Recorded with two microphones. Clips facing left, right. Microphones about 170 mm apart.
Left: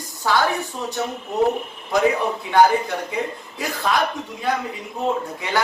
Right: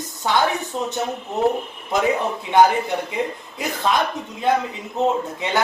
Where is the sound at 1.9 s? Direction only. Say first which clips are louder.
Left 1 dB; 20° right (ahead or behind).